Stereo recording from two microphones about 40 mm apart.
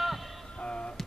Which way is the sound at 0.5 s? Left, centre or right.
Left.